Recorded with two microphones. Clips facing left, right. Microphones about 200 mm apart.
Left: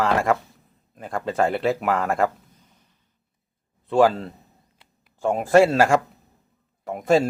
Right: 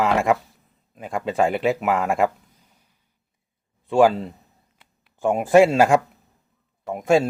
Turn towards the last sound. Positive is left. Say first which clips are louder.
# right 1 dB
turn(degrees=-10)  # may be behind; listen again after turning